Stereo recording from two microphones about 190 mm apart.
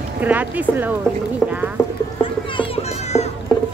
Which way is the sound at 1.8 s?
15° left (ahead or behind).